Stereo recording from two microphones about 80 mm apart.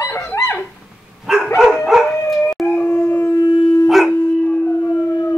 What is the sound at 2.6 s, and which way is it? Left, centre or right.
Howl, left.